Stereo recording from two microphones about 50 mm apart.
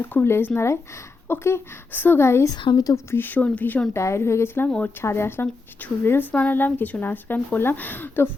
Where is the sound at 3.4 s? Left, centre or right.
Left.